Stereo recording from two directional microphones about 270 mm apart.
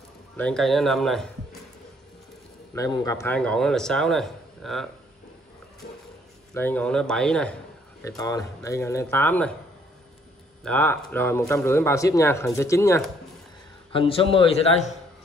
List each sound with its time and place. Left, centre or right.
0.4 s speech: centre
2.7 s speech: centre
5.8 s music: left
6.5 s speech: centre
10.6 s a man's voice: centre; by 15.0 s left